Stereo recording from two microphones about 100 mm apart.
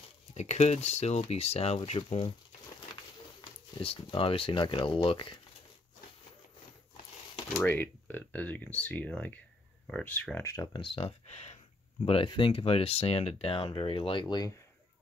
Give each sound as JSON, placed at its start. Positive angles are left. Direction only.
{"t": 0.3, "sound": "speech", "side_deg": 90}
{"t": 1.9, "sound": "speech", "side_deg": 70}
{"t": 3.8, "sound": "speech", "side_deg": 65}
{"t": 7.5, "sound": "speech", "side_deg": 15}
{"t": 10.4, "sound": "speech", "side_deg": 30}
{"t": 10.7, "sound": "speech", "side_deg": 55}
{"t": 12.1, "sound": "speech", "side_deg": 65}
{"t": 14.2, "sound": "speech", "side_deg": 40}